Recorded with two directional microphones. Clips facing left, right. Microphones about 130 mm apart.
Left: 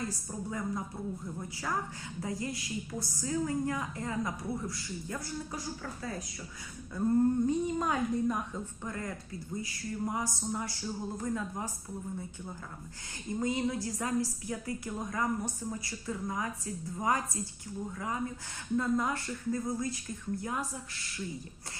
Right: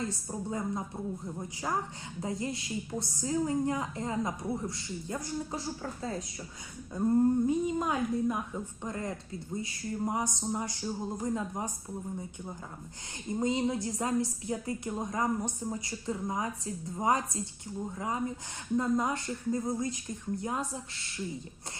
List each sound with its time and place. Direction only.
0.0 s a woman's voice: 25° right (ahead or behind)
7.4 s a woman's voice: 5° right (ahead or behind)
8.8 s a woman's voice: 25° right (ahead or behind)
13.4 s a woman's voice: 20° right (ahead or behind)